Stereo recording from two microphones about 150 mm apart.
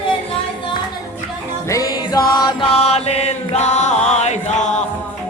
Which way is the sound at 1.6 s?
20° left (ahead or behind).